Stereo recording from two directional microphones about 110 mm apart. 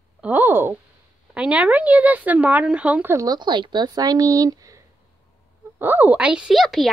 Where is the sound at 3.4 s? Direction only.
45° right (ahead or behind).